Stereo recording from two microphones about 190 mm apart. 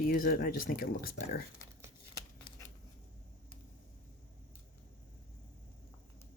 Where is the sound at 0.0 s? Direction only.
50° left (ahead or behind).